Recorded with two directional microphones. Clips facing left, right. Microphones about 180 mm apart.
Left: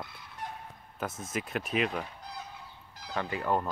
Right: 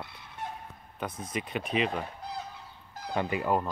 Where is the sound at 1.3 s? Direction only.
Centre (ahead or behind).